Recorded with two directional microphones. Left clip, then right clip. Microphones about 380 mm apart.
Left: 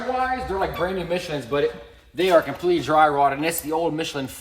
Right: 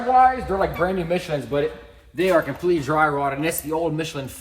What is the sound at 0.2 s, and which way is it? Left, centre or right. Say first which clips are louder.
Speech: right 8 dB; centre.